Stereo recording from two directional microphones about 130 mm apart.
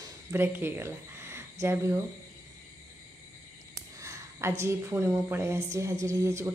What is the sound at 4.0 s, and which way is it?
A woman's voice, 20° right (ahead or behind).